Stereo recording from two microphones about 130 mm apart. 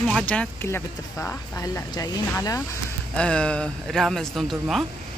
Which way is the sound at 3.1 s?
10° left (ahead or behind).